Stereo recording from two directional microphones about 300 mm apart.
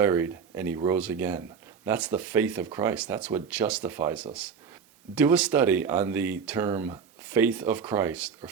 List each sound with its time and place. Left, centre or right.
0.0 s speech: centre